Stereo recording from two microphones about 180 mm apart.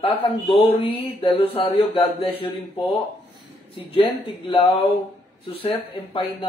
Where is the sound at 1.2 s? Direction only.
30° left (ahead or behind).